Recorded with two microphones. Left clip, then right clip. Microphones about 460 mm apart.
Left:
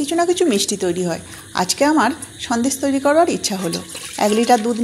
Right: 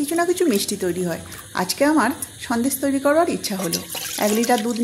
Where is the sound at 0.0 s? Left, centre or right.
Right.